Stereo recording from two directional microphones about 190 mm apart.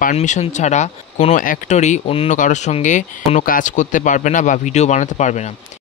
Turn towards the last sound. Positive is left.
turn(degrees=35)  # may be behind; listen again after turning